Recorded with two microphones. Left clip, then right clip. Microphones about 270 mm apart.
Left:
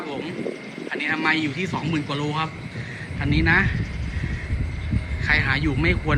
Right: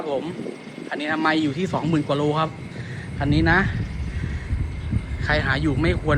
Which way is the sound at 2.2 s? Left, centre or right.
Centre.